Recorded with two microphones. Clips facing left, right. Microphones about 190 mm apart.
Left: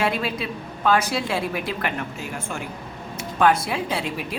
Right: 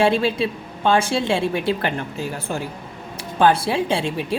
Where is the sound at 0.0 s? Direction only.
30° right (ahead or behind).